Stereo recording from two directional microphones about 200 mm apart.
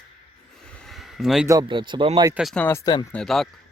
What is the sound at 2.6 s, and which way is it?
Speech, 15° left (ahead or behind).